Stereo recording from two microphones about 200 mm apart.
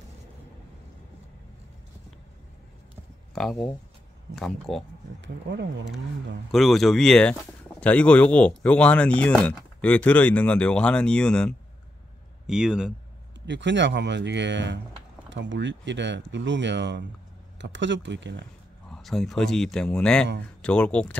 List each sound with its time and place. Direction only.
3.3 s speech: 5° left (ahead or behind)
5.2 s speech: 60° right (ahead or behind)
6.5 s speech: centre (ahead or behind)
13.5 s speech: 65° right (ahead or behind)
18.9 s speech: centre (ahead or behind)